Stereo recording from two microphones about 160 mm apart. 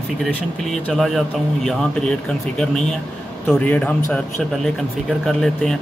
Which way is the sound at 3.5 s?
10° left (ahead or behind).